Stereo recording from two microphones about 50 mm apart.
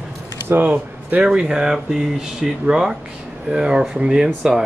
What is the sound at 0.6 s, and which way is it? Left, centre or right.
Speech, right.